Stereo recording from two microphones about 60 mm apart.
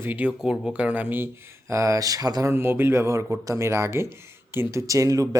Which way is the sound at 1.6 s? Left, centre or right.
Right.